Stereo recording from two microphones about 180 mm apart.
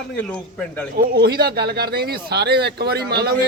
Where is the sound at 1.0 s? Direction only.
65° right (ahead or behind).